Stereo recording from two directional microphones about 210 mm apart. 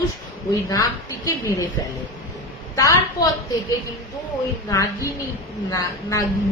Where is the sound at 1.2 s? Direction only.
15° left (ahead or behind).